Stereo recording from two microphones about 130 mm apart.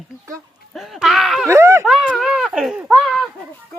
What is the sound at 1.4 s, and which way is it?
Speech, 20° right (ahead or behind).